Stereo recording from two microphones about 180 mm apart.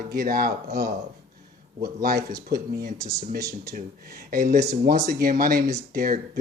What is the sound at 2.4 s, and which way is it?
Speech, 60° right (ahead or behind).